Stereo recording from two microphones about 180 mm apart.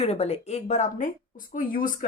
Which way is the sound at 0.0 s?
35° left (ahead or behind).